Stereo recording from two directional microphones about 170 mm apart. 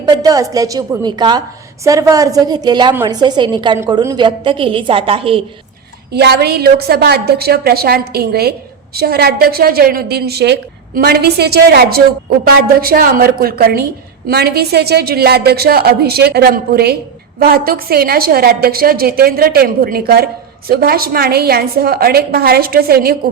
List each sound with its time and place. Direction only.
0.0 s a woman's voice: 25° right (ahead or behind)
6.1 s a woman's voice: 75° right (ahead or behind)